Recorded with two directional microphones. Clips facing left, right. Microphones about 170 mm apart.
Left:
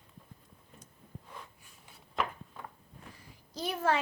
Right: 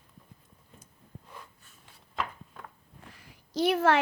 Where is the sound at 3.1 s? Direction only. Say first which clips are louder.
Right 11 dB; 75° right (ahead or behind).